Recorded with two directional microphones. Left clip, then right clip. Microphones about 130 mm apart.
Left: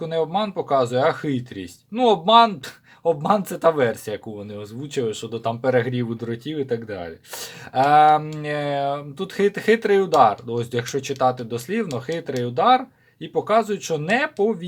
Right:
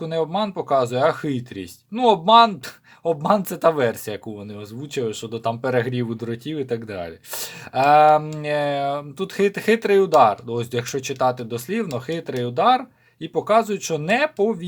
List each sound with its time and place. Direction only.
0.0 s speech: 30° right (ahead or behind)
7.7 s speech: 30° right (ahead or behind)